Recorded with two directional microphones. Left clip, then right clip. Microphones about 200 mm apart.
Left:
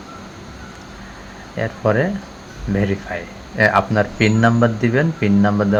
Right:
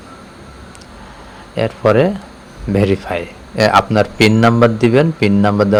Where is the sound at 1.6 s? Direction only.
20° right (ahead or behind).